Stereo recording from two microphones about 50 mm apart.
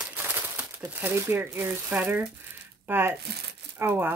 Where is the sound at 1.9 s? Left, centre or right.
Right.